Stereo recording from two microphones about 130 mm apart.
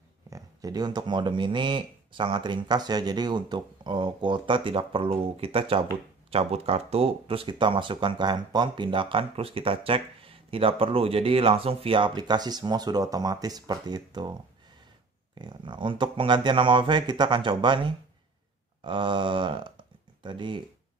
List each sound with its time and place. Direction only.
0.3 s speech: 30° right (ahead or behind)